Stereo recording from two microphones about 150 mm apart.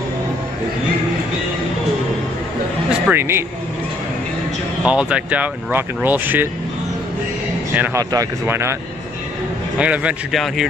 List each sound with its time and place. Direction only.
3.1 s speech: 15° right (ahead or behind)
4.8 s speech: 10° right (ahead or behind)
7.7 s speech: 10° right (ahead or behind)
8.0 s speech: 25° right (ahead or behind)
9.8 s speech: 10° right (ahead or behind)